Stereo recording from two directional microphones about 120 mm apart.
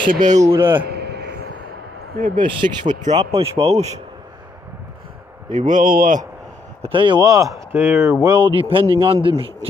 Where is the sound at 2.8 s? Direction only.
80° right.